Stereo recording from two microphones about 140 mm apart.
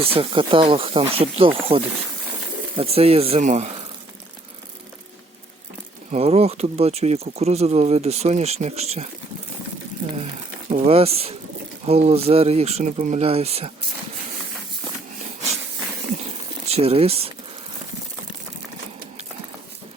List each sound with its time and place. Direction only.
0.0 s speech: 40° right (ahead or behind)
6.1 s speech: 45° right (ahead or behind)
10.8 s speech: 45° right (ahead or behind)
16.6 s speech: 45° right (ahead or behind)